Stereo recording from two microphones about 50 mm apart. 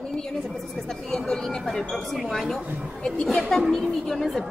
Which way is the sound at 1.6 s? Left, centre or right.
Centre.